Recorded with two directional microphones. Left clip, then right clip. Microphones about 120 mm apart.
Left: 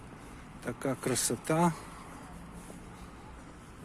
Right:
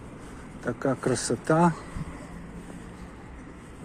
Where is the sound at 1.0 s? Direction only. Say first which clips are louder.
Right 6 dB; 70° left (ahead or behind).